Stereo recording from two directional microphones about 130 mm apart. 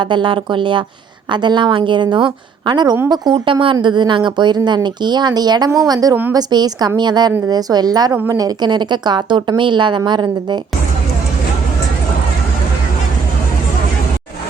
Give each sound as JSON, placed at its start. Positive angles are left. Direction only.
{"t": 0.0, "sound": "a woman's voice", "side_deg": -35}